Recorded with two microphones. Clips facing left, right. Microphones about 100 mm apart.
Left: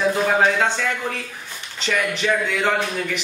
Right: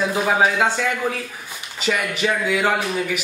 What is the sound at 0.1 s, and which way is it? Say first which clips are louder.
A man's voice: even; 5° right (ahead or behind).